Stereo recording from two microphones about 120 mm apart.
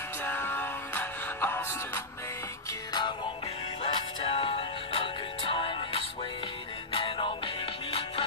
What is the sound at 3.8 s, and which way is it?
Music, 50° left (ahead or behind).